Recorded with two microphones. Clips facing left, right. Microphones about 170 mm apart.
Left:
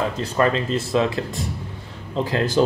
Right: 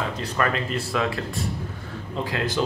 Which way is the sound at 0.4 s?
25° left (ahead or behind).